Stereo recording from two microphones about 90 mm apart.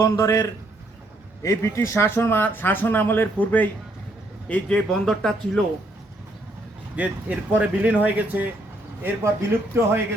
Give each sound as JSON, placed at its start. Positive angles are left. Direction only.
{"t": 0.0, "sound": "speech", "side_deg": 35}
{"t": 4.9, "sound": "speech", "side_deg": 5}
{"t": 6.9, "sound": "a man's voice", "side_deg": -15}